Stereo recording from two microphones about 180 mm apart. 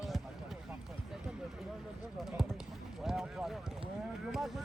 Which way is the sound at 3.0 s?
Centre (ahead or behind).